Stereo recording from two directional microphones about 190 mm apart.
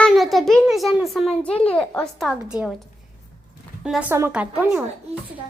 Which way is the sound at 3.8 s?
5° right (ahead or behind).